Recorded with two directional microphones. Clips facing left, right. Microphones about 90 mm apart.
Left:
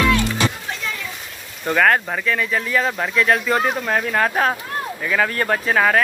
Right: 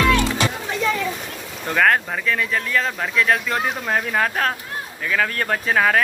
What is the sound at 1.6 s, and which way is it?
Speech, centre (ahead or behind).